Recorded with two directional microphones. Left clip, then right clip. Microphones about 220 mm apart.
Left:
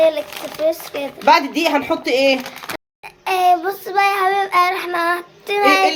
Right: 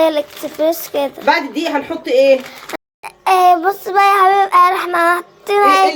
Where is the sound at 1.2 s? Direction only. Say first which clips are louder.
Left 4 dB; 40° left (ahead or behind).